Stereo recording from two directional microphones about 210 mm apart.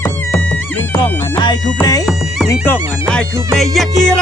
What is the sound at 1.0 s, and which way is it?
Music, 20° left (ahead or behind).